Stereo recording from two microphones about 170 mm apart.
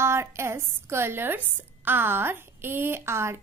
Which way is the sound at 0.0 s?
15° right (ahead or behind).